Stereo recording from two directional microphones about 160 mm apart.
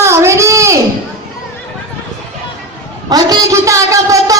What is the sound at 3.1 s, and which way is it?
A woman's voice, 25° right (ahead or behind).